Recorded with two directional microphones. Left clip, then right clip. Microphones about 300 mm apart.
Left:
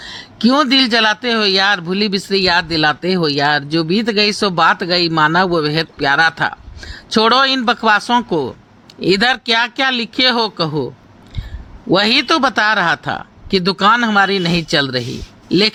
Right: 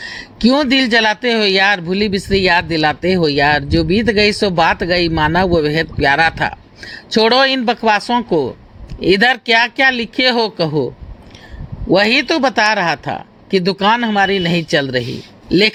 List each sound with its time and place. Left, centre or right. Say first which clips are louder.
0.0 s speech: right 1 dB; centre
10.7 s speech: right 3 dB; left
11.9 s speech: right 1 dB; centre
12.6 s speech: even; left
13.5 s speech: left 1 dB; centre
13.9 s speech: left 1 dB; left
14.3 s a man's voice: right 1 dB; centre